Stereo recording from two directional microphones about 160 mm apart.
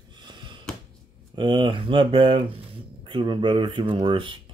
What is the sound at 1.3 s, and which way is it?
Speech, 30° right (ahead or behind).